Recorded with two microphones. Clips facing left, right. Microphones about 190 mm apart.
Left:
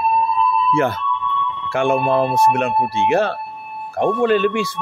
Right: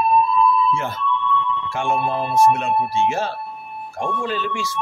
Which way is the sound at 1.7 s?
70° left (ahead or behind).